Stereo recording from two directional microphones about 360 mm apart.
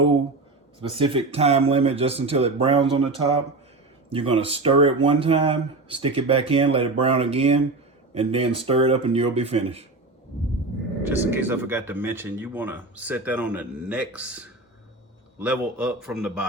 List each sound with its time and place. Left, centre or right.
0.8 s speech: centre
4.1 s speech: centre
11.0 s speech: centre